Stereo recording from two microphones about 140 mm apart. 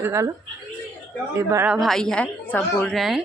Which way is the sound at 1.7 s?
Centre (ahead or behind).